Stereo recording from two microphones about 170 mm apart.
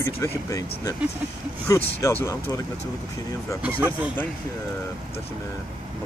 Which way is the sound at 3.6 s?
10° right (ahead or behind).